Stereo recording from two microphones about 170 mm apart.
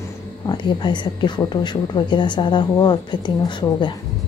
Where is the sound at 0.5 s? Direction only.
25° left (ahead or behind).